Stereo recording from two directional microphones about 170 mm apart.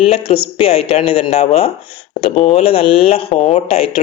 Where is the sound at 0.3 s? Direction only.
35° left (ahead or behind).